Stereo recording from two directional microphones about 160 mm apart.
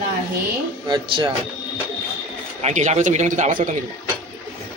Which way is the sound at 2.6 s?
45° right (ahead or behind).